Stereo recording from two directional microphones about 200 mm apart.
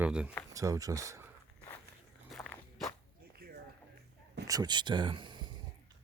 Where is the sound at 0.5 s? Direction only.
15° right (ahead or behind).